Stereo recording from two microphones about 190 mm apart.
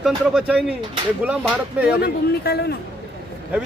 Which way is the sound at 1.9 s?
55° left (ahead or behind).